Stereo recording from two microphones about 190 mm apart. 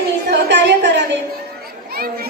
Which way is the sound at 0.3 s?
65° right (ahead or behind).